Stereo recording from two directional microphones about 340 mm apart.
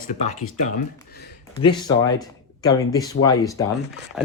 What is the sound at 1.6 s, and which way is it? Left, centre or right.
Speech, centre.